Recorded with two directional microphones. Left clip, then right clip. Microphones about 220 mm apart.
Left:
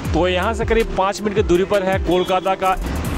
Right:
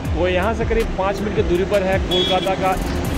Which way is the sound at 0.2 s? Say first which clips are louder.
Even; 25° left (ahead or behind).